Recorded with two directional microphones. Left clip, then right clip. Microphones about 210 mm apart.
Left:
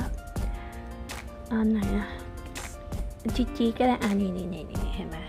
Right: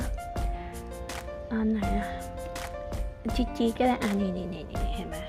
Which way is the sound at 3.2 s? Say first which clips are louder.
Left 1 dB; centre (ahead or behind).